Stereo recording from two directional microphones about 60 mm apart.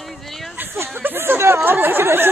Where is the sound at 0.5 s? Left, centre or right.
Right.